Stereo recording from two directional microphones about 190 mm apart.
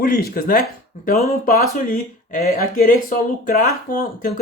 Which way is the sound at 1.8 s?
40° left (ahead or behind).